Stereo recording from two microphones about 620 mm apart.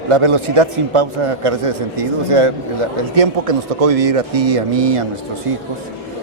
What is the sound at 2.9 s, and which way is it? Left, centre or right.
Speech, right.